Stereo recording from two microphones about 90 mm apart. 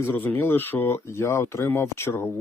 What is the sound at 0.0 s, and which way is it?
Speech, 20° left (ahead or behind).